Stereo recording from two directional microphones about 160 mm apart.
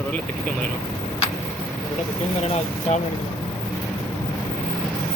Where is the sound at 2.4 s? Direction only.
40° left (ahead or behind).